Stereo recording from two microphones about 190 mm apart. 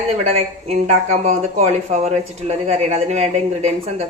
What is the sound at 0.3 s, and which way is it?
Speech, 35° right (ahead or behind).